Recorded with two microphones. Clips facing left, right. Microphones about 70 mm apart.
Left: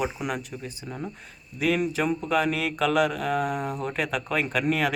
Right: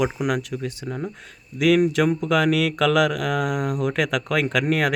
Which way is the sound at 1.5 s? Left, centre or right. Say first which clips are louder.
Right 7 dB; right.